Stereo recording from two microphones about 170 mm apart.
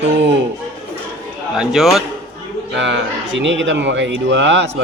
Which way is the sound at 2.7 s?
90° right.